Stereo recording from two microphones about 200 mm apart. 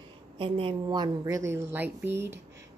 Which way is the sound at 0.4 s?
25° right (ahead or behind).